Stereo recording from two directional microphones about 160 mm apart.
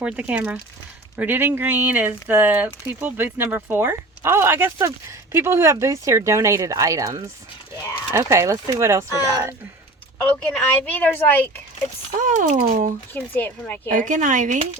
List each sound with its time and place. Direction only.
0.0 s speech: 10° right (ahead or behind)
10.8 s a woman's voice: 10° left (ahead or behind)
12.1 s speech: 55° right (ahead or behind)
13.1 s a woman's voice: 10° left (ahead or behind)
13.9 s speech: 50° right (ahead or behind)